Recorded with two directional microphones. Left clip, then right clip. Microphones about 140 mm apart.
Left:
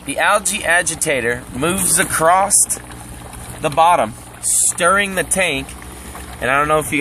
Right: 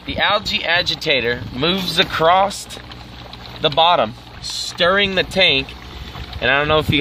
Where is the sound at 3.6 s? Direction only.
90° right.